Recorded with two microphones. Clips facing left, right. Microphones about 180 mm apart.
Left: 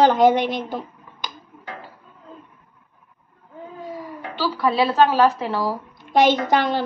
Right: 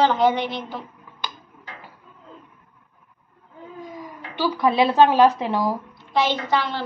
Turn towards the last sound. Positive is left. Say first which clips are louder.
# left 5 dB
turn(degrees=45)  # may be behind; listen again after turning